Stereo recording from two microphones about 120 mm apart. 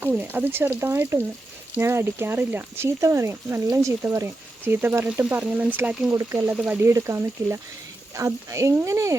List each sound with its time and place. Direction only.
0.1 s speech: 15° right (ahead or behind)
6.1 s speech: 25° right (ahead or behind)
6.5 s speech: 15° right (ahead or behind)
6.9 s speech: 25° right (ahead or behind)